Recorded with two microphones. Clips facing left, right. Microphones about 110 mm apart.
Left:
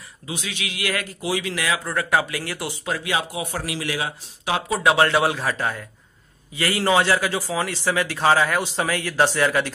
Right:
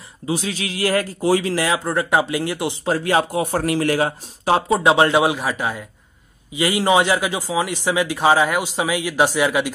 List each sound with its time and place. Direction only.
0.3 s a man's voice: 35° right (ahead or behind); by 9.7 s 15° right (ahead or behind)